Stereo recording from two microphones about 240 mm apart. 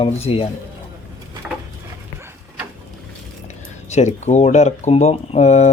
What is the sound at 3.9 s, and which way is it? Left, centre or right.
Speech, left.